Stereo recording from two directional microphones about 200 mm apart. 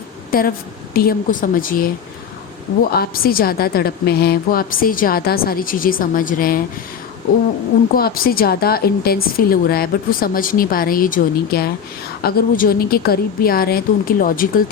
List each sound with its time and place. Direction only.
0.3 s a woman's voice: 45° left (ahead or behind)
7.9 s a woman's voice: 45° left (ahead or behind)